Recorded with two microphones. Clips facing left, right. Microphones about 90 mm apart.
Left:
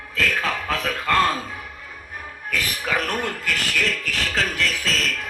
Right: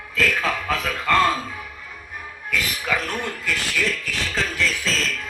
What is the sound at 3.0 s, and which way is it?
Speech, 50° left (ahead or behind).